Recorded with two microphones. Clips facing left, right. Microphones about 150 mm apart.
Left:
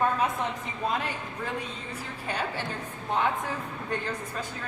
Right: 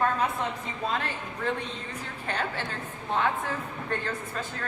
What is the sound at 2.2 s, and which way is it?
Speech, 10° left (ahead or behind).